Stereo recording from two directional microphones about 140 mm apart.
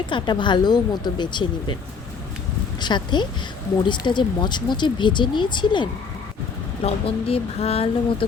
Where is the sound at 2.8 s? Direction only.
35° left (ahead or behind).